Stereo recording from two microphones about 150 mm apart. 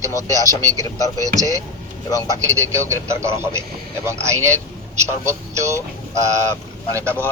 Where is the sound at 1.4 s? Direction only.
20° right (ahead or behind).